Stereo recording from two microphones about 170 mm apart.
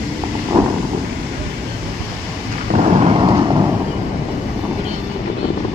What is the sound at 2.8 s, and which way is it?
Vehicle, 40° right (ahead or behind).